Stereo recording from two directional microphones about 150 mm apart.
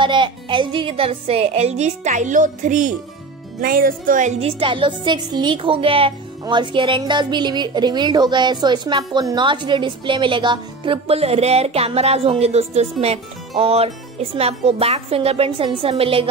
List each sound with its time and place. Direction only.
0.0 s speech: 35° right (ahead or behind); by 2.9 s 60° right (ahead or behind)
3.6 s speech: 70° right (ahead or behind)
4.4 s a woman's voice: 40° right (ahead or behind)